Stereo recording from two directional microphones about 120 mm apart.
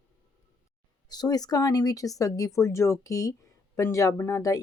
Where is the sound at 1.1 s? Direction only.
35° left (ahead or behind).